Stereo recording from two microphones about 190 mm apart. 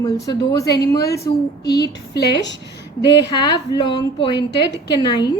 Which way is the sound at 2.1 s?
65° left (ahead or behind).